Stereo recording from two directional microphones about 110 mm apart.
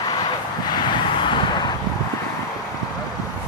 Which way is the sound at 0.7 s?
45° left (ahead or behind).